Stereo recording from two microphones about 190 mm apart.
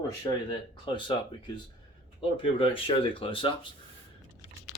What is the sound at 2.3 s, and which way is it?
Speech, 30° left (ahead or behind).